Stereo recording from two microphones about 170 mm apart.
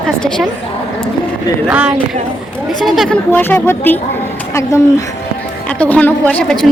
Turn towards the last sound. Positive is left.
turn(degrees=5)  # may be behind; listen again after turning